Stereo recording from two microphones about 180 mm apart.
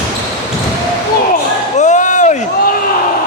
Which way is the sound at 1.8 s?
40° left (ahead or behind).